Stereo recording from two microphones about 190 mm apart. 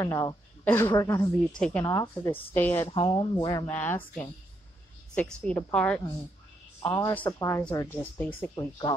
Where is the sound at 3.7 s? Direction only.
10° left (ahead or behind).